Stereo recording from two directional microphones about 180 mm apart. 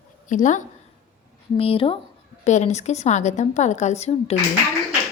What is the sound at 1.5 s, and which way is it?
A woman's voice, 30° left (ahead or behind).